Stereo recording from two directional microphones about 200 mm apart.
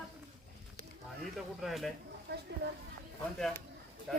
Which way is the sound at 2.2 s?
55° right (ahead or behind).